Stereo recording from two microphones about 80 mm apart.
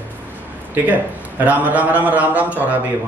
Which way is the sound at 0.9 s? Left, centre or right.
Centre.